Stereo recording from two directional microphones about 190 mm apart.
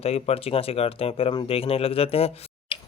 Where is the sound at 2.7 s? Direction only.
25° left (ahead or behind).